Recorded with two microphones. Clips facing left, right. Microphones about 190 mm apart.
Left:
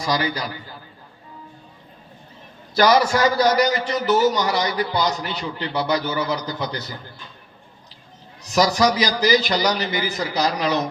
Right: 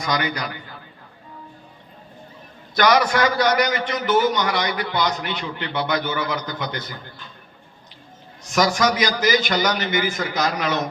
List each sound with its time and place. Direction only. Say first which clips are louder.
0.0 s a man's voice: left 1 dB; 30° left (ahead or behind)
2.7 s a man's voice: left 1 dB; 35° left (ahead or behind)
8.4 s a man's voice: left 1 dB; 35° left (ahead or behind)